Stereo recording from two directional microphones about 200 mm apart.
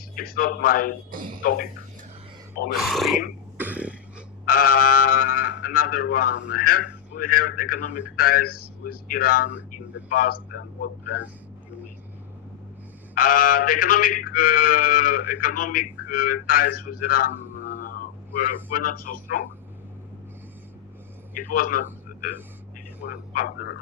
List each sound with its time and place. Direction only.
0.2 s music: 45° left (ahead or behind)
2.7 s speech: centre (ahead or behind)
3.6 s throat clearing: 5° right (ahead or behind)
4.4 s music: 45° left (ahead or behind)
5.0 s speech: 45° left (ahead or behind)
7.2 s music: 45° left (ahead or behind)
13.1 s music: 45° left (ahead or behind)
21.3 s a man's voice: 45° left (ahead or behind)